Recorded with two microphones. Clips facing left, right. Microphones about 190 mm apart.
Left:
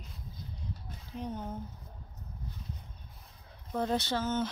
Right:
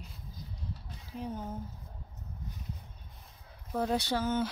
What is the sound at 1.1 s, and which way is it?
Speech, 5° right (ahead or behind).